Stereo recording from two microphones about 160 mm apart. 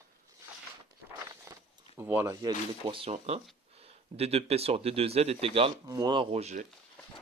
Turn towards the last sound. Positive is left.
turn(degrees=-45)  # may be behind; listen again after turning